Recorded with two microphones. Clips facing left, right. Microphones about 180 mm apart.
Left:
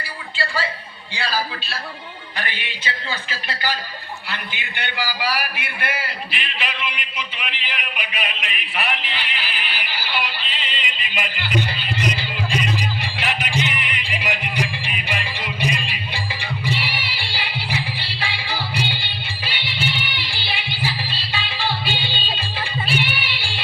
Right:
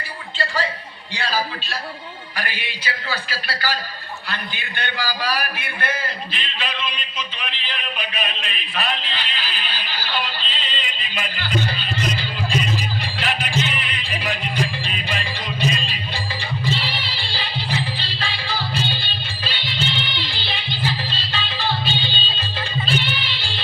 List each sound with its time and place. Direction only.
1.3 s a man's voice: 15° right (ahead or behind)
2.8 s a man's voice: 20° left (ahead or behind)
12.2 s music: 15° left (ahead or behind)